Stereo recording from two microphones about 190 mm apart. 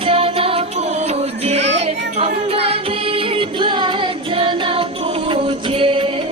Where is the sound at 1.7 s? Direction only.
35° right (ahead or behind).